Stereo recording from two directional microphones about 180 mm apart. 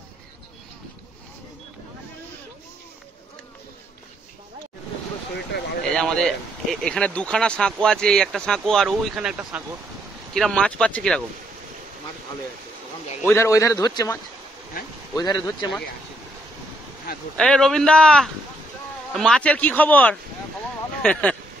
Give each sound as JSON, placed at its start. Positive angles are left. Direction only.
{"t": 5.9, "sound": "speech", "side_deg": 5}
{"t": 13.2, "sound": "a man's voice", "side_deg": 15}
{"t": 17.4, "sound": "a man's voice", "side_deg": 5}